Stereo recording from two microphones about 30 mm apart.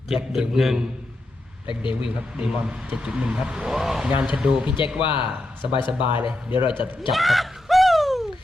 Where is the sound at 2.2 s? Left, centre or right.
Right.